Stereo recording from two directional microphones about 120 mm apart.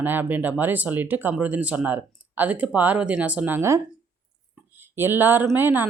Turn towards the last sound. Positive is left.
turn(degrees=-15)  # may be behind; listen again after turning